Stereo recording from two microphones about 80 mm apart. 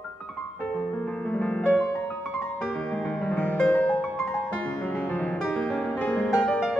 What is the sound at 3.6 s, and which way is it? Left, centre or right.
Music, centre.